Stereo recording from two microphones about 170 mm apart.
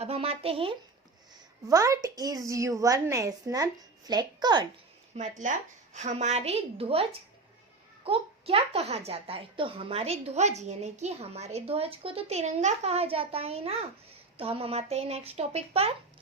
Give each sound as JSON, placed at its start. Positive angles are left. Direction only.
{"t": 0.0, "sound": "a woman's voice", "side_deg": -35}
{"t": 1.6, "sound": "a woman's voice", "side_deg": -20}
{"t": 5.1, "sound": "a woman's voice", "side_deg": -45}